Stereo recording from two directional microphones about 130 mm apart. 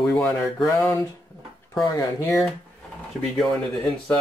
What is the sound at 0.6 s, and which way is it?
Speech, 20° left (ahead or behind).